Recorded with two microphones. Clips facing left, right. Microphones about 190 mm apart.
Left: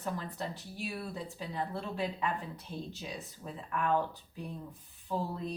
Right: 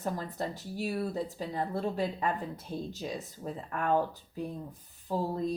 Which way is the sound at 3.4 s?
45° right (ahead or behind).